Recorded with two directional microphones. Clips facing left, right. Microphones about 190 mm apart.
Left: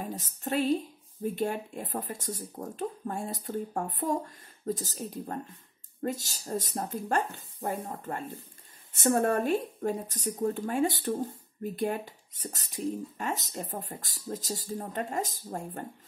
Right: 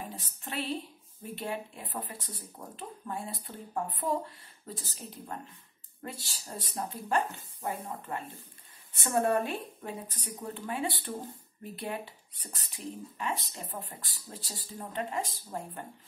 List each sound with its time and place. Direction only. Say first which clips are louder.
0.0 s speech: left 6 dB; 40° left (ahead or behind)